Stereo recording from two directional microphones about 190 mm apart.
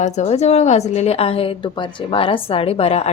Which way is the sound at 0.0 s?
35° left (ahead or behind).